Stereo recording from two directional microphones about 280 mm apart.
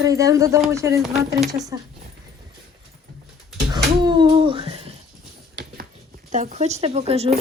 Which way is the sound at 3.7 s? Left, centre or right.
Centre.